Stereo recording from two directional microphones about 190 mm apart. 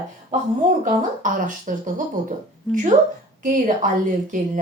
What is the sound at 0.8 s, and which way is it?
Speech, 45° right (ahead or behind).